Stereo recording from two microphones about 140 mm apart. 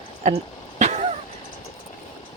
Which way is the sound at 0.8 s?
55° right (ahead or behind).